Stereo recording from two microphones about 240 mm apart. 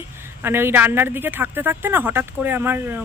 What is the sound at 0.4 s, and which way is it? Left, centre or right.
Speech, centre.